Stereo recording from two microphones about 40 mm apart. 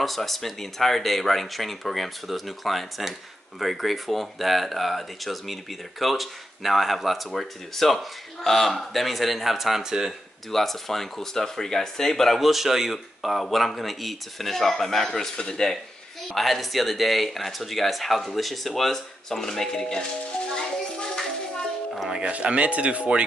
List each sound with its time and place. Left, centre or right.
0.0 s speech: centre
10.5 s speech: centre
12.4 s speech: centre
16.3 s speech: centre
20.5 s music: centre
22.3 s speech: right